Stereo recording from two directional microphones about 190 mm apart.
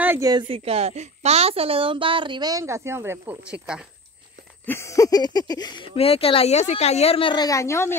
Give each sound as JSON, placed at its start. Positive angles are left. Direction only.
{"t": 0.0, "sound": "a sound", "side_deg": -10}
{"t": 0.3, "sound": "a woman's voice", "side_deg": -25}
{"t": 4.6, "sound": "speech", "side_deg": 15}